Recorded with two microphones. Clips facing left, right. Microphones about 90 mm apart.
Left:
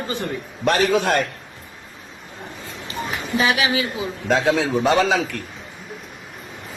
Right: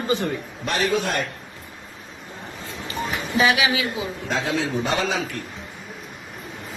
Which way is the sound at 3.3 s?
40° left (ahead or behind).